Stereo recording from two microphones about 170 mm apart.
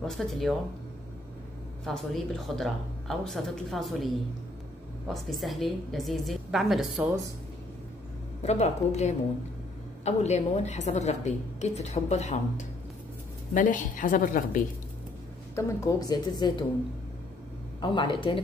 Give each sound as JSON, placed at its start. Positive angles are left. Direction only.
{"t": 0.0, "sound": "speech", "side_deg": 0}
{"t": 1.9, "sound": "speech", "side_deg": 0}
{"t": 8.4, "sound": "a woman's voice", "side_deg": 40}
{"t": 15.5, "sound": "a woman's voice", "side_deg": 20}
{"t": 17.7, "sound": "a woman's voice", "side_deg": 25}